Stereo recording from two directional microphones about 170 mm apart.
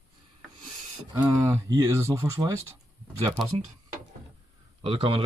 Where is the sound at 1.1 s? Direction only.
15° right (ahead or behind).